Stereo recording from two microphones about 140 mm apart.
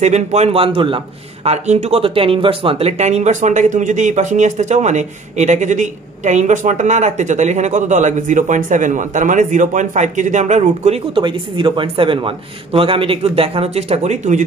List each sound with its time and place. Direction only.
0.0 s speech: 55° right (ahead or behind)
11.1 s speech: 35° right (ahead or behind); by 14.4 s 55° right (ahead or behind)